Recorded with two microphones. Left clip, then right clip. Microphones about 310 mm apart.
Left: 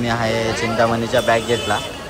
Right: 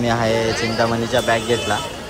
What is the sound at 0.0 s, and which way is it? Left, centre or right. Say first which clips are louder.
Speech: right 1 dB; centre.